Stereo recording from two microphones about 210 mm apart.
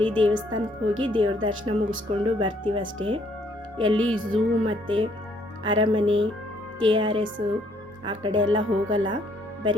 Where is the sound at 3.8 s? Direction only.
70° right (ahead or behind).